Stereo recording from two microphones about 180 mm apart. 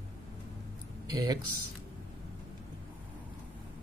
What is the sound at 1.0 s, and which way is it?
Speech, 20° right (ahead or behind).